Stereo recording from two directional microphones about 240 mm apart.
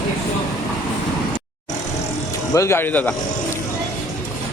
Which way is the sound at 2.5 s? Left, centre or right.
Centre.